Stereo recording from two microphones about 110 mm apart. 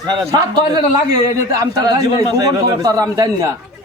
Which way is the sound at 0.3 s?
45° right (ahead or behind).